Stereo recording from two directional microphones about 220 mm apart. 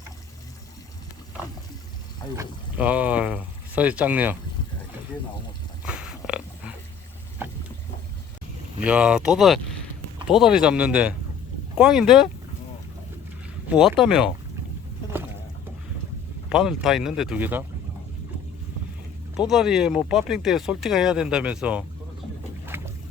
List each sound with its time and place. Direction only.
2.3 s speech: 10° right (ahead or behind)
5.8 s pig: 5° right (ahead or behind)
7.4 s vehicle: 10° right (ahead or behind)
8.8 s speech: 5° right (ahead or behind)
13.7 s speech: centre (ahead or behind)
16.5 s speech: 5° right (ahead or behind)
19.5 s speech: centre (ahead or behind)
22.7 s boat: 10° right (ahead or behind)